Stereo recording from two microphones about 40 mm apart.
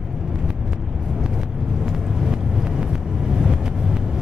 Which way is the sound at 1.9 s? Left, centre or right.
Centre.